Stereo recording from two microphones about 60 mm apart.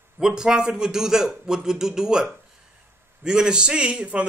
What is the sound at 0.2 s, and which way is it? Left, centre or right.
A man's voice, centre.